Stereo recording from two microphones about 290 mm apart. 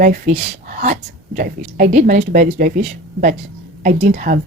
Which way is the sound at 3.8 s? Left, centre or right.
Right.